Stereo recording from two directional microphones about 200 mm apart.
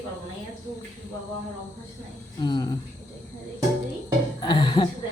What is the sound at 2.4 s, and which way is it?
Speech, 20° left (ahead or behind).